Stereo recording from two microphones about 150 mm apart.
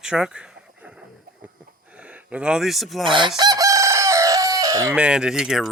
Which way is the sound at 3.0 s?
35° right (ahead or behind).